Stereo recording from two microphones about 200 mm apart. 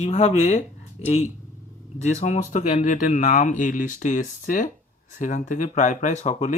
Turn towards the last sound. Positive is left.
turn(degrees=35)  # may be behind; listen again after turning